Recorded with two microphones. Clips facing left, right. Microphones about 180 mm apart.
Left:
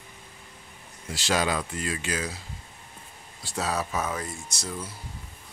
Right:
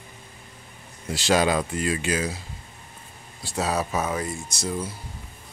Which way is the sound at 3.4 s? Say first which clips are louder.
Right 4 dB; 10° right (ahead or behind).